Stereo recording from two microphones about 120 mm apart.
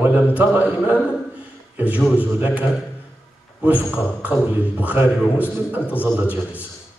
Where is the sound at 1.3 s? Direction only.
15° right (ahead or behind).